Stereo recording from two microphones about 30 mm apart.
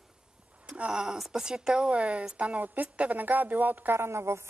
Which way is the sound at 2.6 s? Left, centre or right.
Right.